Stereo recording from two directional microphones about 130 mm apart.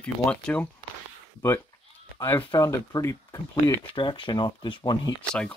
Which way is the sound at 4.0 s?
40° left (ahead or behind).